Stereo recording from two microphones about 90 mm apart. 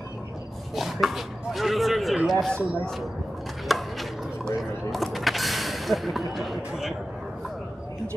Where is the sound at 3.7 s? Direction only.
Centre (ahead or behind).